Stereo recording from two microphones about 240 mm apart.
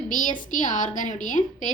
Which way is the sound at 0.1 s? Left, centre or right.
Left.